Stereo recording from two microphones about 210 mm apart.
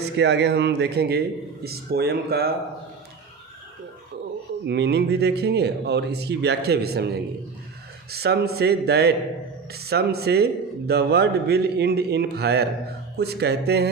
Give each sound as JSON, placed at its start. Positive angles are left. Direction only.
{"t": 0.0, "sound": "a man's voice", "side_deg": -55}
{"t": 4.6, "sound": "a man's voice", "side_deg": -55}